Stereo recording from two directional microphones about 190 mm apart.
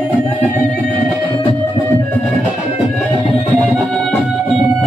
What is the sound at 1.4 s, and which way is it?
Music, 25° left (ahead or behind).